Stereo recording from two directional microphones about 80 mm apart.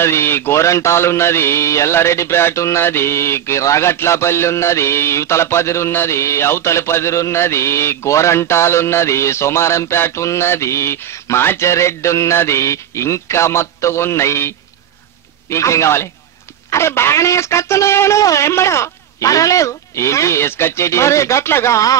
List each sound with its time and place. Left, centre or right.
0.0 s mantra: left
15.5 s mantra: left